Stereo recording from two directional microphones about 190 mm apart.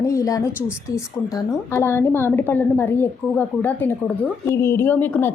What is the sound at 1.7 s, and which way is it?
A woman's voice, 15° left (ahead or behind).